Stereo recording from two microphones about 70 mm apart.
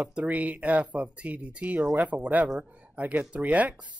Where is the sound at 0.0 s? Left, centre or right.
Centre.